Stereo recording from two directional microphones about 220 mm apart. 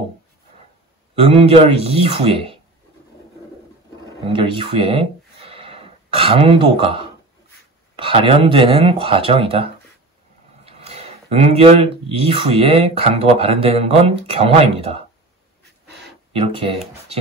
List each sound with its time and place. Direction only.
1.1 s speech: 25° right (ahead or behind)
4.3 s speech: 25° right (ahead or behind)
16.3 s speech: 25° right (ahead or behind)